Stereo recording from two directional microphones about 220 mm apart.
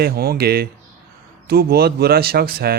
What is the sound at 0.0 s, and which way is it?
Speech, 45° right (ahead or behind).